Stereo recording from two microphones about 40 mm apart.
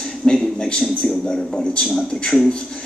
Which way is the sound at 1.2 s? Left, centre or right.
Centre.